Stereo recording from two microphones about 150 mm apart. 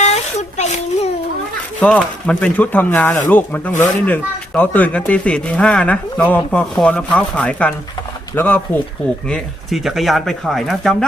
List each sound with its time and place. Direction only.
0.0 s a sound: 50° left (ahead or behind)
1.8 s speech: 10° left (ahead or behind)
9.3 s speech: centre (ahead or behind)